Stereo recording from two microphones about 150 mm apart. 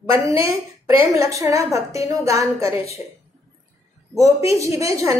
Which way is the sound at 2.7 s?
40° left (ahead or behind).